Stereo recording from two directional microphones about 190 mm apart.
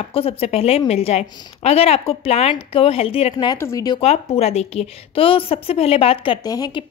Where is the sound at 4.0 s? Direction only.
30° left (ahead or behind).